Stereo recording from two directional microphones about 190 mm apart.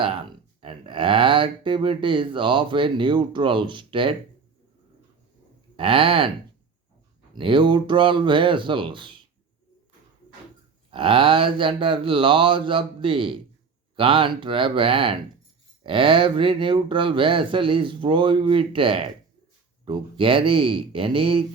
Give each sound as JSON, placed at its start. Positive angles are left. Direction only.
{"t": 0.6, "sound": "speech", "side_deg": -25}
{"t": 5.7, "sound": "speech", "side_deg": -30}
{"t": 7.3, "sound": "speech", "side_deg": -25}
{"t": 10.9, "sound": "speech", "side_deg": -30}